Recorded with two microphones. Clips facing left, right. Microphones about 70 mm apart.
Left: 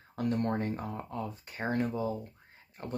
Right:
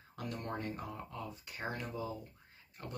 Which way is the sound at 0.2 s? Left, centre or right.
Left.